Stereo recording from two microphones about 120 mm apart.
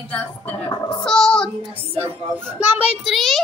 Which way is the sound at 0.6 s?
40° left (ahead or behind).